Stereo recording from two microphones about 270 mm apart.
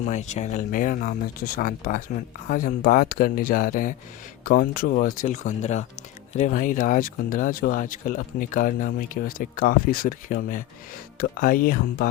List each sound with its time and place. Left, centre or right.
0.0 s speech: left